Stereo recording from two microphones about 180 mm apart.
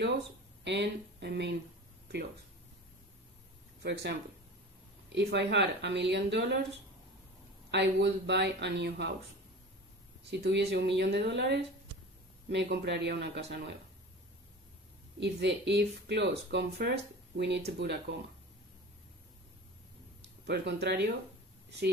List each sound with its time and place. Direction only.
0.7 s speech: 70° right (ahead or behind)
3.8 s speech: 65° right (ahead or behind)
7.7 s speech: 70° right (ahead or behind)
10.3 s speech: 70° right (ahead or behind)
15.1 s speech: 75° right (ahead or behind)
20.4 s speech: 65° right (ahead or behind)